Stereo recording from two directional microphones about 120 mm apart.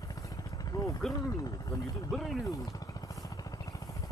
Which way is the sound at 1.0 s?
Centre (ahead or behind).